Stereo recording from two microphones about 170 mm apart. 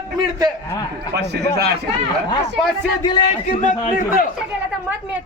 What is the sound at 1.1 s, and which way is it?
Speech, 75° right (ahead or behind).